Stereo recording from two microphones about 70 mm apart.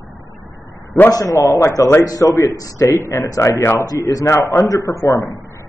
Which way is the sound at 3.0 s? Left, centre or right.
Left.